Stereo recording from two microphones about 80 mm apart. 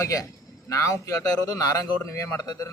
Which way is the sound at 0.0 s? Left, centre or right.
Left.